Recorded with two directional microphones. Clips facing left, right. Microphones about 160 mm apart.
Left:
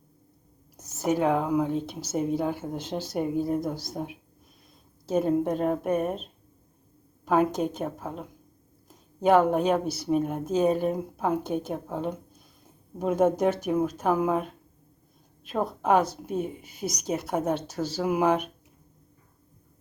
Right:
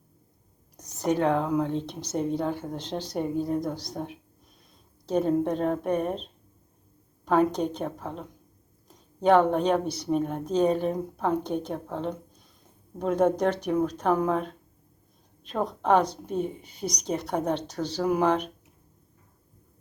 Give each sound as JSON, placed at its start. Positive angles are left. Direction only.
{"t": 0.8, "sound": "speech", "side_deg": 5}
{"t": 7.3, "sound": "speech", "side_deg": 5}